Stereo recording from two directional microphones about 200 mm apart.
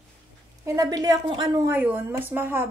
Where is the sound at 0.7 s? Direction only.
20° right (ahead or behind).